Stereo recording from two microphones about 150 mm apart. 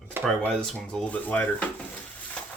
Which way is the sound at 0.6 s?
5° left (ahead or behind).